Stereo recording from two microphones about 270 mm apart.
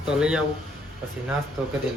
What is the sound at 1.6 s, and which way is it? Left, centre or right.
Speech, centre.